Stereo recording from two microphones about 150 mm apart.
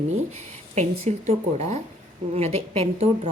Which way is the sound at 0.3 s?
50° right (ahead or behind).